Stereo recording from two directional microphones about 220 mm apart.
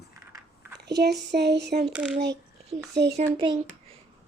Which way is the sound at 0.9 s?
50° right (ahead or behind).